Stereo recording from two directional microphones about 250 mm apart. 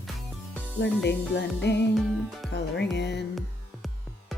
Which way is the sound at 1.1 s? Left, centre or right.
Left.